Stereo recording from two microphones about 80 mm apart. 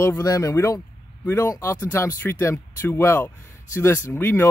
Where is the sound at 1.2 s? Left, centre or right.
Left.